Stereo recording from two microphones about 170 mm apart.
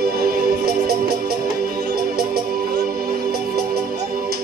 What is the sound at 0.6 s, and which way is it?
Music, 65° right (ahead or behind).